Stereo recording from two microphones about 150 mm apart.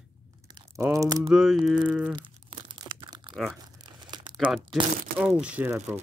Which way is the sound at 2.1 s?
35° right (ahead or behind).